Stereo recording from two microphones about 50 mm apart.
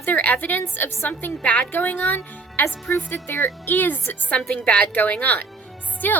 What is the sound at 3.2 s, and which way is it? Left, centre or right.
Speech, left.